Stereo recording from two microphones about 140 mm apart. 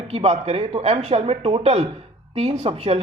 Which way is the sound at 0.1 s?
45° right (ahead or behind).